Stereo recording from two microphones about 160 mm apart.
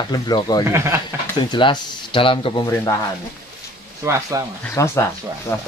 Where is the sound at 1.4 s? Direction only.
30° left (ahead or behind).